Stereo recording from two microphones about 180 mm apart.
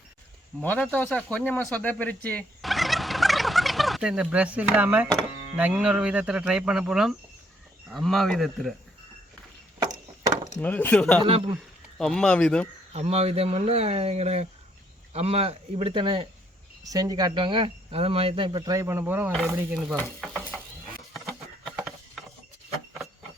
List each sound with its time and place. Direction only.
0.6 s speech: 10° left (ahead or behind)
9.8 s chop: 25° right (ahead or behind)
10.6 s speech: 10° left (ahead or behind)
11.2 s speech: 30° right (ahead or behind)
11.9 s speech: 5° left (ahead or behind)
12.9 s speech: 35° right (ahead or behind); by 20.0 s 5° right (ahead or behind)
20.0 s stir: 5° left (ahead or behind)
21.2 s a sound: centre (ahead or behind)